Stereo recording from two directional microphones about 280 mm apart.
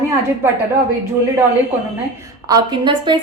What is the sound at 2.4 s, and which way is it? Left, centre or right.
Speech, centre.